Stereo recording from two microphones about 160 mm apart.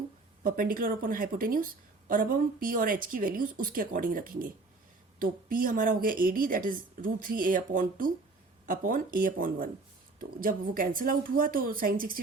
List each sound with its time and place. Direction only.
0.4 s a woman's voice: 60° right (ahead or behind)